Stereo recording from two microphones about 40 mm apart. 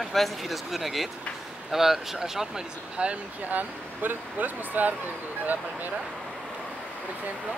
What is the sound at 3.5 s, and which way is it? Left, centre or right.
Speech, right.